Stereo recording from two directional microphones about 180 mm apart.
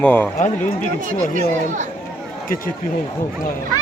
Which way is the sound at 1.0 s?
45° right (ahead or behind).